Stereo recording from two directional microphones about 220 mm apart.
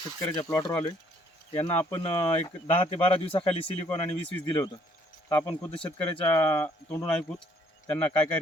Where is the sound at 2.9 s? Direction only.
25° left (ahead or behind); by 8.4 s 5° left (ahead or behind).